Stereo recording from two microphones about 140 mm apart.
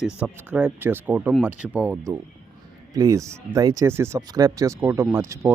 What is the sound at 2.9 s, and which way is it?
Speech, 25° right (ahead or behind).